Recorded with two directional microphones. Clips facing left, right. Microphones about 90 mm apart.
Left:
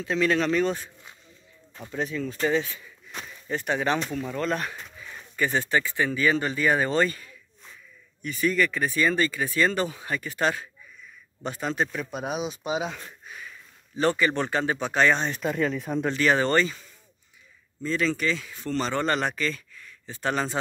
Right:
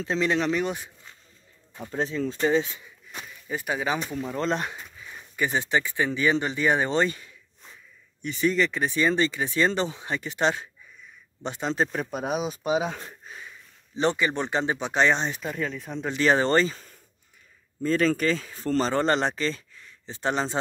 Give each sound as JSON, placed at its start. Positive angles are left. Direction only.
{"t": 0.0, "sound": "speech", "side_deg": -25}
{"t": 1.9, "sound": "speech", "side_deg": -30}
{"t": 3.4, "sound": "speech", "side_deg": -5}
{"t": 4.2, "sound": "speech", "side_deg": -25}
{"t": 15.3, "sound": "speech", "side_deg": 0}
{"t": 16.2, "sound": "speech", "side_deg": -30}
{"t": 17.8, "sound": "speech", "side_deg": -45}